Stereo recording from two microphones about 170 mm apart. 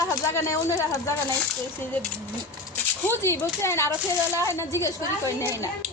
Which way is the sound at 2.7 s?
15° left (ahead or behind).